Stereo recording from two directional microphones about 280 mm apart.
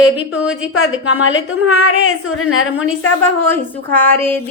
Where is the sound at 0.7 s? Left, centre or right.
Left.